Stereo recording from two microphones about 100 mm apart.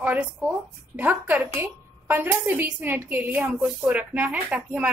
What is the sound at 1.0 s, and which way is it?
A woman's voice, 15° right (ahead or behind).